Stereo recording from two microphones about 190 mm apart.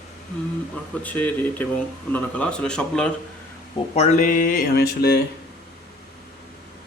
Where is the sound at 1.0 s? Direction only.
10° left (ahead or behind).